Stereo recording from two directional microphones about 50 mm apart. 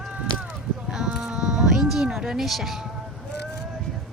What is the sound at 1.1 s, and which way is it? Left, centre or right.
Insect, centre.